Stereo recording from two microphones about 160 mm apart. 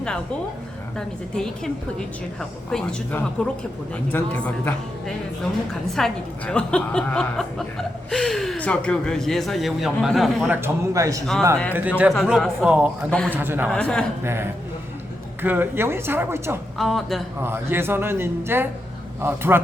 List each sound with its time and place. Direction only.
0.9 s a woman's voice: 5° left (ahead or behind)
5.9 s a woman's voice: 5° left (ahead or behind)
10.5 s a man's voice: 15° right (ahead or behind)
11.7 s a man's voice: 10° right (ahead or behind)
13.1 s a woman's voice: 5° left (ahead or behind)
13.3 s a man's voice: 10° right (ahead or behind)
13.7 s a woman's voice: 5° left (ahead or behind)
15.4 s a man's voice: 10° right (ahead or behind)
16.7 s a woman's voice: centre (ahead or behind)
17.4 s a man's voice: 15° right (ahead or behind)